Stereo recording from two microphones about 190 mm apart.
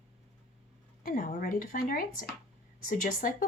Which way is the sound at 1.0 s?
45° left (ahead or behind).